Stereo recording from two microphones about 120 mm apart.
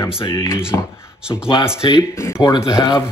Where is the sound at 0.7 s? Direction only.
25° left (ahead or behind).